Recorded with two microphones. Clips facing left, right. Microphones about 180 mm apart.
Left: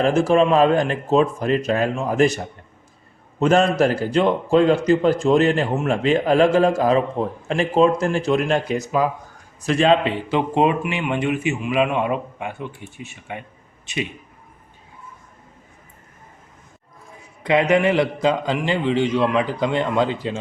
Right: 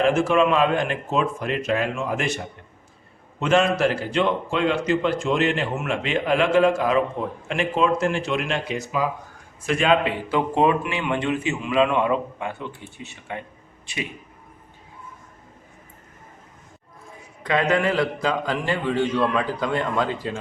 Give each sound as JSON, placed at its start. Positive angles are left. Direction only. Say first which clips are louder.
{"t": 0.0, "sound": "a man's voice", "louder": "left 2 dB", "side_deg": 35}
{"t": 3.4, "sound": "a man's voice", "louder": "left 3 dB", "side_deg": 40}
{"t": 9.6, "sound": "a man's voice", "louder": "left 3 dB", "side_deg": 35}
{"t": 17.4, "sound": "a man's voice", "louder": "left 4 dB", "side_deg": 20}